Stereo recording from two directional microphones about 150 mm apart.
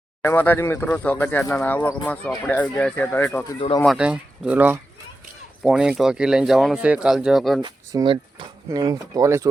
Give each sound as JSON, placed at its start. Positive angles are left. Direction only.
{"t": 0.2, "sound": "speech", "side_deg": 15}
{"t": 3.8, "sound": "speech", "side_deg": -5}
{"t": 7.6, "sound": "speech", "side_deg": -35}